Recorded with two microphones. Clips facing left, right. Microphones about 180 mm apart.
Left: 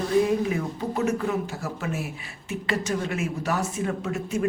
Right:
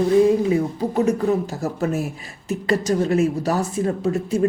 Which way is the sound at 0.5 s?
35° right (ahead or behind).